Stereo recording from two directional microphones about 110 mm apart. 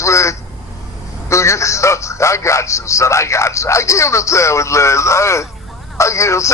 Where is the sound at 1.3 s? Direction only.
25° left (ahead or behind).